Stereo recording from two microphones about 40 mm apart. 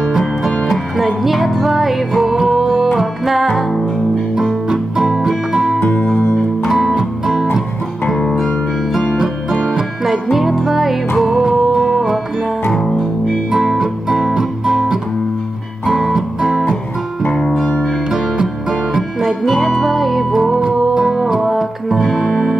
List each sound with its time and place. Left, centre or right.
0.7 s music: centre
4.6 s music: centre
8.5 s music: centre
10.3 s music: centre
12.7 s music: centre
13.5 s music: centre
17.3 s music: centre
18.1 s music: centre